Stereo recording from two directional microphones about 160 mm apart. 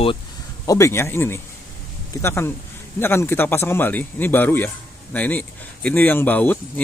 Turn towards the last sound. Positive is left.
turn(degrees=10)  # may be behind; listen again after turning